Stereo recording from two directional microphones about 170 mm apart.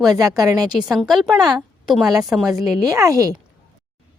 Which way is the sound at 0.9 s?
Centre (ahead or behind).